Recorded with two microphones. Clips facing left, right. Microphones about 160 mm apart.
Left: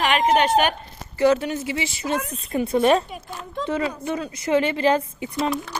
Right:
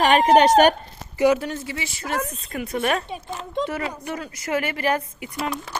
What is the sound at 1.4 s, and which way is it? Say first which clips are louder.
Speech: left 2 dB; 5° left (ahead or behind).